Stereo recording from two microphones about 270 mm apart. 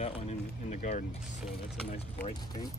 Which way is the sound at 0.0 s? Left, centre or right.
Left.